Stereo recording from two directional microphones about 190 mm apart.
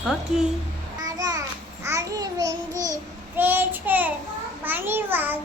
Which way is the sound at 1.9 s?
20° right (ahead or behind).